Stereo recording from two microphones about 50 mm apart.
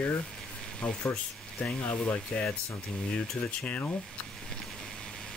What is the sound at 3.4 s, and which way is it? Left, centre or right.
Speech, left.